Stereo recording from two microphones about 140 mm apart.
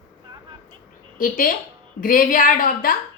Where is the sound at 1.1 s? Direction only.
75° left (ahead or behind).